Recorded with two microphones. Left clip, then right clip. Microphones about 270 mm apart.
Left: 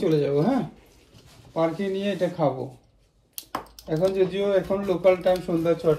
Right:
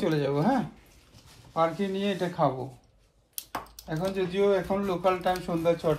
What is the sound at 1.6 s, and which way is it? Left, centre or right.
Speech, right.